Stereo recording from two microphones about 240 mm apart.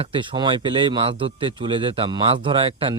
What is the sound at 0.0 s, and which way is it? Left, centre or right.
A man's voice, right.